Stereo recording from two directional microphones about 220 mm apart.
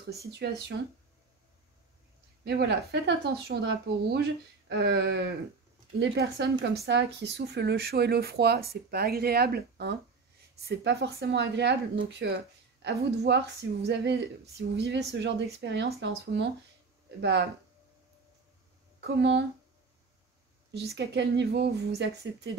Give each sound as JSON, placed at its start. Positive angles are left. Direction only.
{"t": 0.3, "sound": "speech", "side_deg": -45}
{"t": 2.4, "sound": "speech", "side_deg": -50}
{"t": 18.9, "sound": "speech", "side_deg": -50}
{"t": 20.9, "sound": "speech", "side_deg": -50}